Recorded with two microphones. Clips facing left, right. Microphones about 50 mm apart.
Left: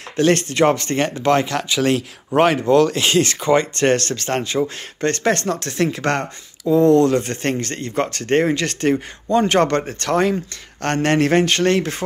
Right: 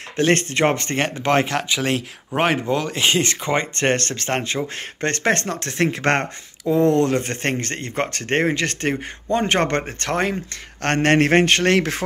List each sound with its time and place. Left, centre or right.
0.3 s speech: right
10.8 s speech: right
11.7 s speech: right